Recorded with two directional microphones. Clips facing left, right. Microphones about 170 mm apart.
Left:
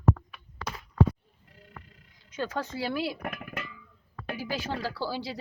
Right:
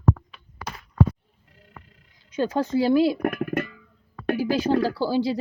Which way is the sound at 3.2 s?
55° right (ahead or behind).